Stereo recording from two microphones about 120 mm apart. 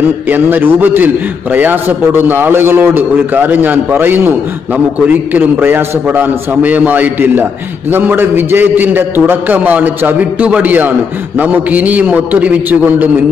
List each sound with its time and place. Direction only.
0.3 s a man's voice: 15° right (ahead or behind)